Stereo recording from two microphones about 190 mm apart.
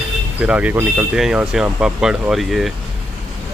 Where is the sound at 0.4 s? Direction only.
5° right (ahead or behind).